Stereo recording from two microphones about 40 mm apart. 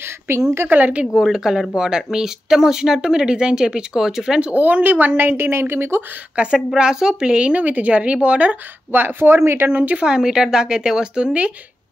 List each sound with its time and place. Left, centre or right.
0.3 s a woman's voice: right
0.7 s a woman's voice: right
1.1 s speech: centre
4.6 s a woman's voice: right
5.4 s speech: right
6.3 s speech: right
7.5 s speech: right
8.9 s speech: right
9.8 s speech: right
10.0 s speech: centre